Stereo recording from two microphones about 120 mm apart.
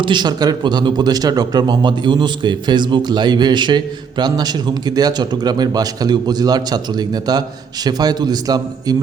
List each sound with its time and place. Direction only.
0.0 s speech: 40° right (ahead or behind)